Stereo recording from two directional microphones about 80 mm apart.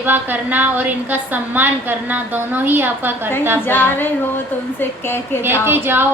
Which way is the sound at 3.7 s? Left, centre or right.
Left.